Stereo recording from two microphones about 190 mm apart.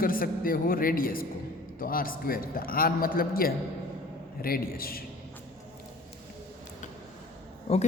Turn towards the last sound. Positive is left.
turn(degrees=30)  # may be behind; listen again after turning